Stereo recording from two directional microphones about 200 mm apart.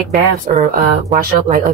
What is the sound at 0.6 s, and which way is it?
A woman's voice, 45° right (ahead or behind).